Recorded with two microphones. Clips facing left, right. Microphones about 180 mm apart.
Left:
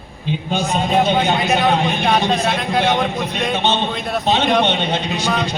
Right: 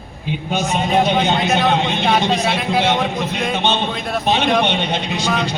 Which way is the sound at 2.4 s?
5° right (ahead or behind).